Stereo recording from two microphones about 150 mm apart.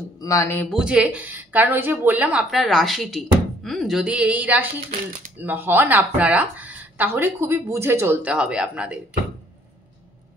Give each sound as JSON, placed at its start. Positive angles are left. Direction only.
{"t": 0.2, "sound": "speech", "side_deg": 20}
{"t": 0.7, "sound": "a woman's voice", "side_deg": -5}